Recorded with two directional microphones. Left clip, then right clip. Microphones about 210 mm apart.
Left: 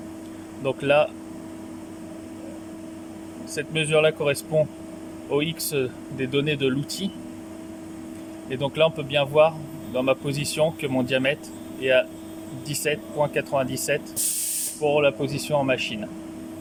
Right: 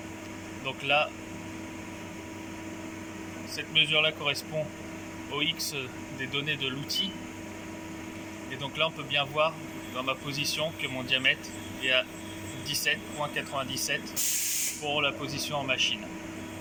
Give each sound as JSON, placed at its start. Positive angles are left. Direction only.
{"t": 0.6, "sound": "speech", "side_deg": 65}
{"t": 3.5, "sound": "speech", "side_deg": 60}
{"t": 8.4, "sound": "speech", "side_deg": 60}